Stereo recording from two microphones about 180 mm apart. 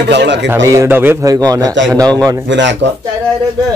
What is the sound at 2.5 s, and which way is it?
Speech, 80° right.